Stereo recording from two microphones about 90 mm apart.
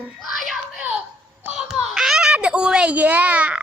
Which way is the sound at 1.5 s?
5° right (ahead or behind).